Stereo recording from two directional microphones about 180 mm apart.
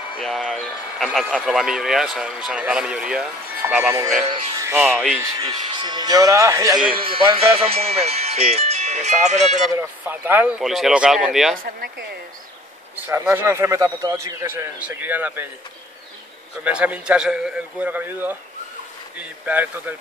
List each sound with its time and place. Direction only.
0.2 s speech: centre (ahead or behind)
4.6 s music: 15° right (ahead or behind)
5.4 s speech: 25° right (ahead or behind)
6.9 s speech: 30° right (ahead or behind)
9.8 s speech: 10° right (ahead or behind)
11.6 s speech: 60° right (ahead or behind)
12.9 s a man's voice: 10° right (ahead or behind)
16.6 s a man's voice: 5° right (ahead or behind)